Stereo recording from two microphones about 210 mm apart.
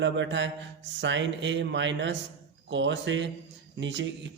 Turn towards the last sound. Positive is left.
turn(degrees=-60)  # may be behind; listen again after turning